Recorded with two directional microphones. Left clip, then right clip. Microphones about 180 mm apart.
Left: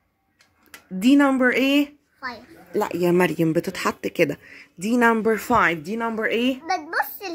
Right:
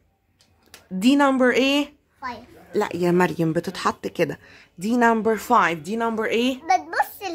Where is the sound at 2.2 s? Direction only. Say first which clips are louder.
Even; 10° right (ahead or behind).